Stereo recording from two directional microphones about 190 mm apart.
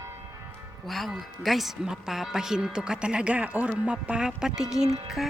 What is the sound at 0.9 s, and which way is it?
Speech, centre (ahead or behind).